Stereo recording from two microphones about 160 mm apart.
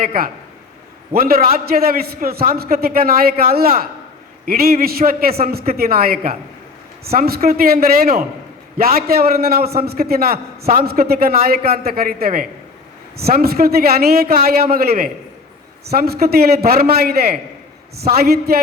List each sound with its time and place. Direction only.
0.0 s a man's voice: 65° right (ahead or behind)